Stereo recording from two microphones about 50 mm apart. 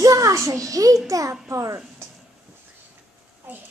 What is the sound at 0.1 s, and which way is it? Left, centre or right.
Speech, right.